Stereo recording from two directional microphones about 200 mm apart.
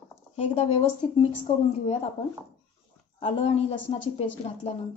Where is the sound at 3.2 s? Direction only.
30° left (ahead or behind).